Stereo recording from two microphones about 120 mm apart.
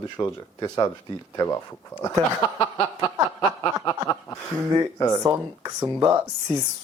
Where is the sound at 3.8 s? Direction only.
30° left (ahead or behind).